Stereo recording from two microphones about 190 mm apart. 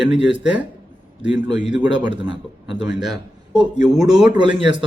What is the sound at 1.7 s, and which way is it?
Speech, 25° right (ahead or behind).